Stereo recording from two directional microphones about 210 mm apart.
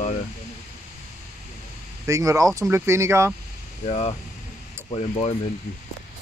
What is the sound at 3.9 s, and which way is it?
Speech, 30° left (ahead or behind).